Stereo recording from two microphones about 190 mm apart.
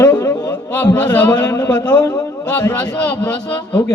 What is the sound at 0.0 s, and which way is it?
Music, 10° left (ahead or behind).